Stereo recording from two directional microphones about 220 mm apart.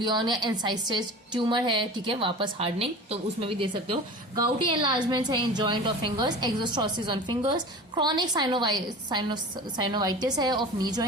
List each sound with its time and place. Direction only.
0.0 s a woman's voice: 20° right (ahead or behind)